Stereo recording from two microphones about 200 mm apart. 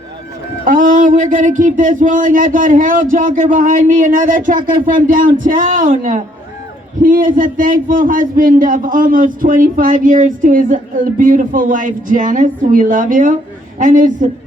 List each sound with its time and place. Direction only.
0.6 s a man's voice: 40° right (ahead or behind)